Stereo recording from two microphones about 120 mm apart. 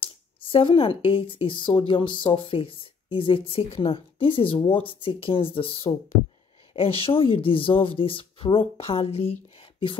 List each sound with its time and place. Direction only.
0.0 s speech: 45° left (ahead or behind)